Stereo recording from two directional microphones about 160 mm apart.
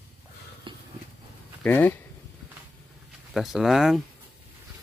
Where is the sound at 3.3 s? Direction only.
Centre (ahead or behind).